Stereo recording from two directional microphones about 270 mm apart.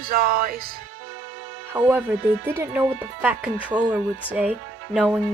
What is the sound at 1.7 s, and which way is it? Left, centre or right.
Speech, centre.